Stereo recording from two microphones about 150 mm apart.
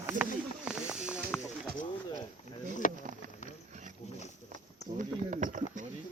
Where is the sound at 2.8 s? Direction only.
60° left (ahead or behind).